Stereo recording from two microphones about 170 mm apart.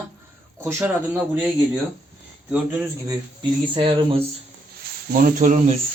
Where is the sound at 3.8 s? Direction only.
30° right (ahead or behind).